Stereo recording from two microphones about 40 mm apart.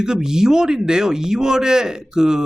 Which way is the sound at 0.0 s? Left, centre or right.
Centre.